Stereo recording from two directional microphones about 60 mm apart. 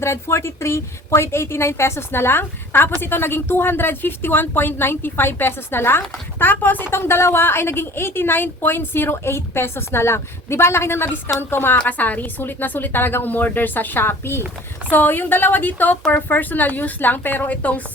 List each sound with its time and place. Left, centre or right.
0.0 s a woman's voice: left
6.9 s a woman's voice: left
11.9 s speech: left